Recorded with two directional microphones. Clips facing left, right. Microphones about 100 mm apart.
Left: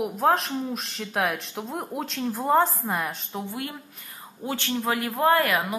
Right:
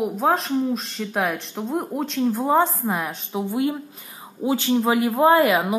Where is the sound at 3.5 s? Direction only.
20° right (ahead or behind).